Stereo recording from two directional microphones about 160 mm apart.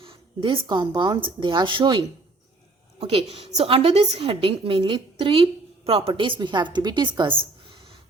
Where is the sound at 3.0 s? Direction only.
35° right (ahead or behind).